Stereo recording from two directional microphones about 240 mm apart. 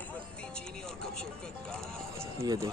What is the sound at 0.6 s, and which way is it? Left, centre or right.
Music, centre.